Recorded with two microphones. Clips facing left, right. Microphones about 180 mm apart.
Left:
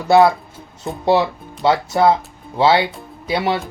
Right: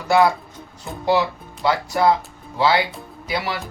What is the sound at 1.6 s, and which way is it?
Speech, 25° left (ahead or behind).